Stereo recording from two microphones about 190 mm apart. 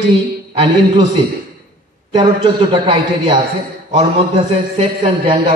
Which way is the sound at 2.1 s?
25° right (ahead or behind).